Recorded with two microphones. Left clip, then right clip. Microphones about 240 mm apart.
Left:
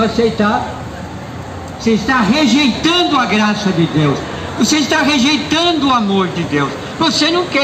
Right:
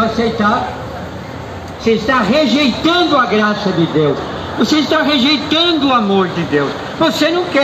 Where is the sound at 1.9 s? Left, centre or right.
Left.